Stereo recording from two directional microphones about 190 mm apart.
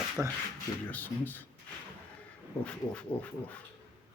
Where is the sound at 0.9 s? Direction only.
10° left (ahead or behind).